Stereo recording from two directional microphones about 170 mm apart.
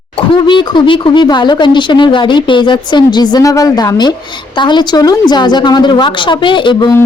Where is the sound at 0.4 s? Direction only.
30° left (ahead or behind).